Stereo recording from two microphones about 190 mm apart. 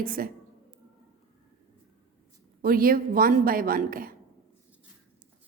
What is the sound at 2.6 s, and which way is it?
A woman's voice, 50° right (ahead or behind).